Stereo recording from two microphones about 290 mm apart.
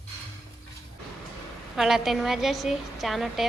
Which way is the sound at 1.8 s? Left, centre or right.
Centre.